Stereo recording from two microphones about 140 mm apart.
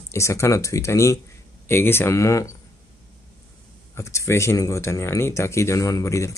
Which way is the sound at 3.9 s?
20° left (ahead or behind).